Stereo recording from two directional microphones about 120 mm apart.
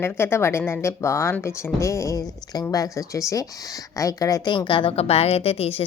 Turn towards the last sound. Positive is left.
turn(degrees=55)  # may be behind; listen again after turning